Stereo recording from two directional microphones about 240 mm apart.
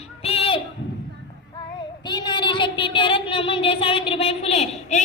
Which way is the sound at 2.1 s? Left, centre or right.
Centre.